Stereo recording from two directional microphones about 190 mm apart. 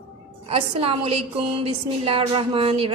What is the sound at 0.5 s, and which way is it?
A woman's voice, 30° right (ahead or behind).